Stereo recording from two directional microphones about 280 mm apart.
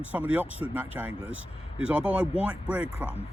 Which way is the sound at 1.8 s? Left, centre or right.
Centre.